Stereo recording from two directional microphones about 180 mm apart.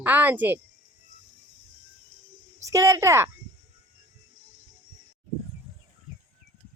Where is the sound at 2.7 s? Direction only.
15° right (ahead or behind).